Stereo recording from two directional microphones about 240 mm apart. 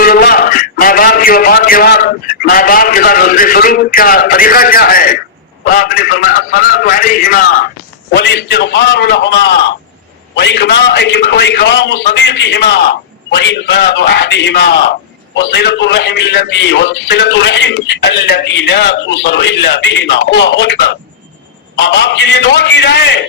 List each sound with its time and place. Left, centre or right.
0.0 s a man's voice: left
21.8 s a man's voice: left